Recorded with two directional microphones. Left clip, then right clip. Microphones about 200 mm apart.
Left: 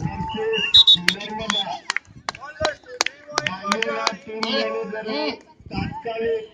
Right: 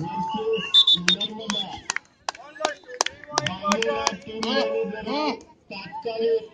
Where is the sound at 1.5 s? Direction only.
25° right (ahead or behind).